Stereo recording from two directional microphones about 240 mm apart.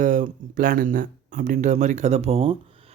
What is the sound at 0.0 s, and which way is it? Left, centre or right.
Speech, right.